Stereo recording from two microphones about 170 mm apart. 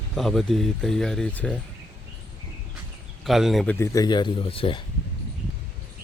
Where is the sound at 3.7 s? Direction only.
20° left (ahead or behind).